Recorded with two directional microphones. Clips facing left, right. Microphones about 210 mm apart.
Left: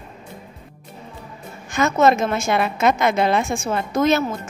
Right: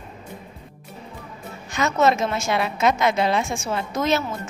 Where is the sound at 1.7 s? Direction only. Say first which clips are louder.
Left 3 dB; 50° left (ahead or behind).